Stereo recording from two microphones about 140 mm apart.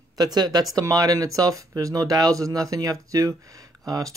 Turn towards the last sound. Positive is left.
turn(degrees=-25)  # may be behind; listen again after turning